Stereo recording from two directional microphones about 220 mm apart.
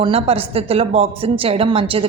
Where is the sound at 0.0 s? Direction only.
25° right (ahead or behind).